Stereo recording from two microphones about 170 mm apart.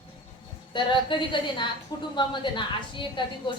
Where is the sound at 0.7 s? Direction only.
30° left (ahead or behind).